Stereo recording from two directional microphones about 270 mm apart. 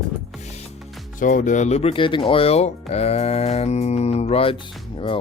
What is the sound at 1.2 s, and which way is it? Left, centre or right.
Speech, left.